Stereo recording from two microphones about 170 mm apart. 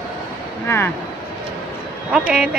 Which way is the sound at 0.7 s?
15° left (ahead or behind).